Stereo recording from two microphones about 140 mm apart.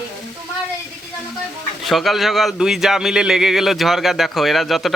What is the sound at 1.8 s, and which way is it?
Speech, centre (ahead or behind).